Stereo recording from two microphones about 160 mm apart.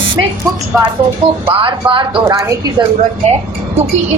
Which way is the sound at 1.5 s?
30° right (ahead or behind).